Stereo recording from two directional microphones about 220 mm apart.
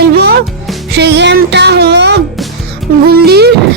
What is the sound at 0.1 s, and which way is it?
Music, 50° right (ahead or behind).